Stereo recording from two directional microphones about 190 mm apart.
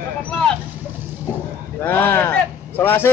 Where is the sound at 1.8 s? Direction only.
10° left (ahead or behind).